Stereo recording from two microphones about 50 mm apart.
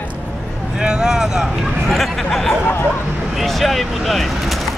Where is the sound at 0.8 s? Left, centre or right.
Centre.